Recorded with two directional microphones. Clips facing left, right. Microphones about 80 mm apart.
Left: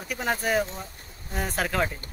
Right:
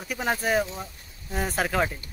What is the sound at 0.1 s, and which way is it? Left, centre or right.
Speech, centre.